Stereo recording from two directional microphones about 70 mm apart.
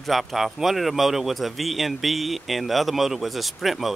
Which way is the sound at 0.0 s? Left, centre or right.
Centre.